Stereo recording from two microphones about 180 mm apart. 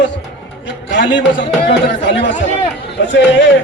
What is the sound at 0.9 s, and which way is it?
A man's voice, 85° left.